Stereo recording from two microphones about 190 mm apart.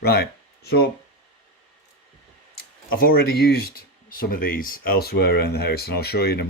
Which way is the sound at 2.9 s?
50° left (ahead or behind).